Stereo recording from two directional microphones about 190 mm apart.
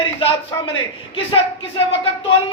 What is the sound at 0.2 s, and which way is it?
A man's voice, 30° left (ahead or behind).